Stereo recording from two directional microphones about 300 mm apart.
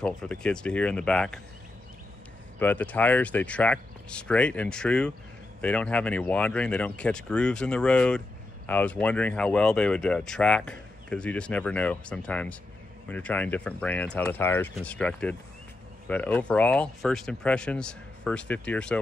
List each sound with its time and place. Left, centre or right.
0.0 s speech: centre
2.6 s speech: centre